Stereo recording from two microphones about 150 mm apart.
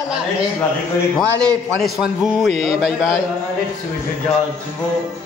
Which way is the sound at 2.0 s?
5° right (ahead or behind).